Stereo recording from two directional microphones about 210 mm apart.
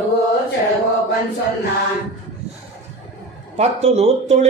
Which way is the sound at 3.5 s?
30° right (ahead or behind).